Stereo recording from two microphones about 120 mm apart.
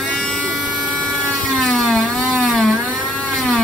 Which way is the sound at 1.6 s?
5° left (ahead or behind).